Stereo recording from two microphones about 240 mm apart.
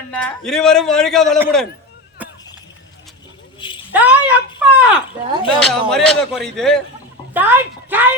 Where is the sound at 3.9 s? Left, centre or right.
Centre.